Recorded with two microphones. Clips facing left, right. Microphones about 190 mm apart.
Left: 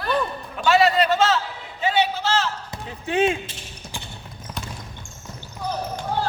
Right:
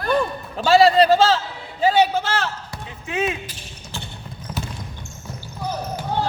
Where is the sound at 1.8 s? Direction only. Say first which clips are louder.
Right 4 dB; 40° right (ahead or behind).